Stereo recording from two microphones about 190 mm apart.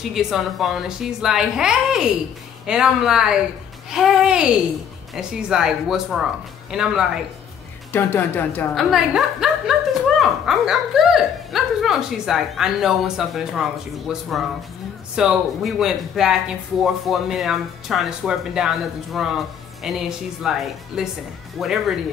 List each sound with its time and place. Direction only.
0.1 s speech: centre (ahead or behind)
7.9 s a woman's voice: 10° left (ahead or behind)
8.7 s speech: centre (ahead or behind)